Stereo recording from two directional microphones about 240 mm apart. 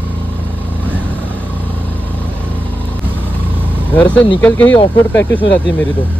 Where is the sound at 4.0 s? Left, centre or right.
Centre.